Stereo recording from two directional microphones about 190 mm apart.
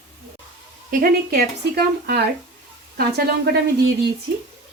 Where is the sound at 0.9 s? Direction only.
50° right (ahead or behind).